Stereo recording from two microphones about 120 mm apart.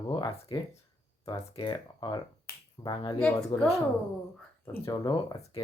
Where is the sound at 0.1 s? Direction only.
40° left (ahead or behind).